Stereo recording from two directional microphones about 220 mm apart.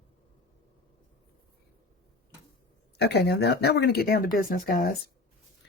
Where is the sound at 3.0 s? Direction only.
50° left (ahead or behind).